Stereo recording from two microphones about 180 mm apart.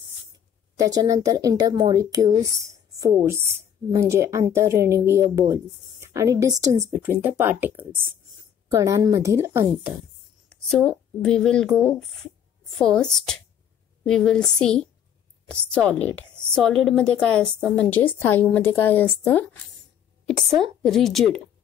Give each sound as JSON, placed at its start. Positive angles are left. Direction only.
{"t": 0.7, "sound": "a woman's voice", "side_deg": -20}
{"t": 10.7, "sound": "a woman's voice", "side_deg": 5}
{"t": 14.0, "sound": "a woman's voice", "side_deg": 5}